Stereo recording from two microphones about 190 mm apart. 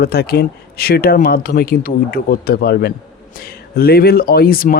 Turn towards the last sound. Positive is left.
turn(degrees=50)  # may be behind; listen again after turning